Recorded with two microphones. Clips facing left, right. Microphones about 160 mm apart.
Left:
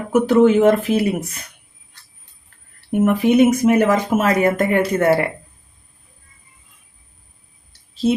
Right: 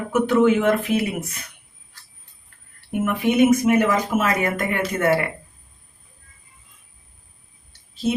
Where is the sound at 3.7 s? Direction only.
40° left (ahead or behind).